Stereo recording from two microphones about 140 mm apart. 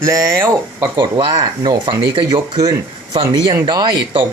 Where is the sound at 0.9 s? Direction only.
35° right (ahead or behind).